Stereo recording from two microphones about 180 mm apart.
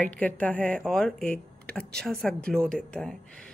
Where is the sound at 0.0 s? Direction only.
5° left (ahead or behind).